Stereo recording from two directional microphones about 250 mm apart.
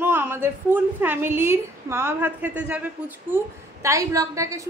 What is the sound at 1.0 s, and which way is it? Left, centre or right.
A woman's voice, centre.